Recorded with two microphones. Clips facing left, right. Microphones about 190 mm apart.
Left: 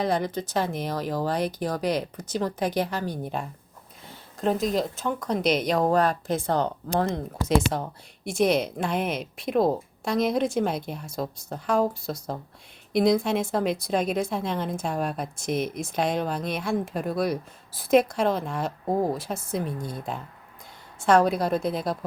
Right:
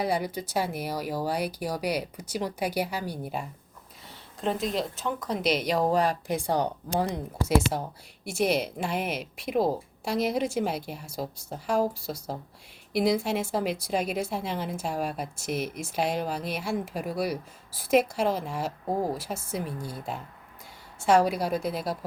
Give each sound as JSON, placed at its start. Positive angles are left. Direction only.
{"t": 0.0, "sound": "a woman's voice", "side_deg": -10}
{"t": 4.6, "sound": "speech", "side_deg": 45}
{"t": 4.9, "sound": "a woman's voice", "side_deg": 0}